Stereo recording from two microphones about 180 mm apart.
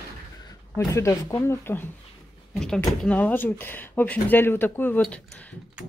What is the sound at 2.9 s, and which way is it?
Speech, 10° left (ahead or behind).